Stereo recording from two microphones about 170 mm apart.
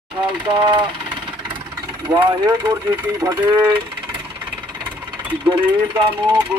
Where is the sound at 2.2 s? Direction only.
25° right (ahead or behind).